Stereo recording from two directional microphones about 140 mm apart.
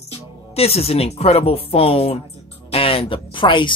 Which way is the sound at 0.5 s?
45° left (ahead or behind).